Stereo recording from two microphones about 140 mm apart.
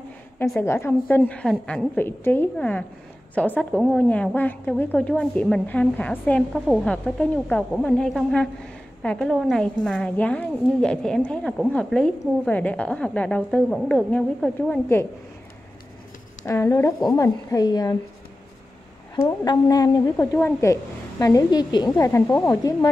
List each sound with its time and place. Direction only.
0.4 s a woman's voice: 15° left (ahead or behind)
2.0 s a woman's voice: 15° left (ahead or behind)
16.4 s a woman's voice: 20° left (ahead or behind)
19.2 s a woman's voice: 30° left (ahead or behind)